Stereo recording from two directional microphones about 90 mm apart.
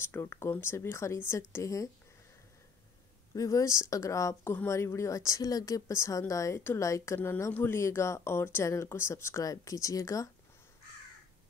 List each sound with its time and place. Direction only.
0.0 s speech: 25° left (ahead or behind)
3.3 s speech: 40° left (ahead or behind)